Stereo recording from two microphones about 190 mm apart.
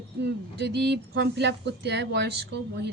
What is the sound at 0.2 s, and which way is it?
Speech, 60° right (ahead or behind).